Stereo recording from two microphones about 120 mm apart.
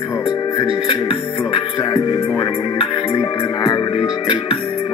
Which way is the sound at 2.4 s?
45° left (ahead or behind).